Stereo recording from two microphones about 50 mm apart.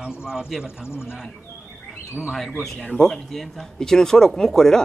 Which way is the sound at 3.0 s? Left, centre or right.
Centre.